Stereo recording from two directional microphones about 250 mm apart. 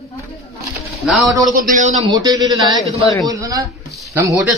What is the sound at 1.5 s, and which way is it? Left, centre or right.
Speech, right.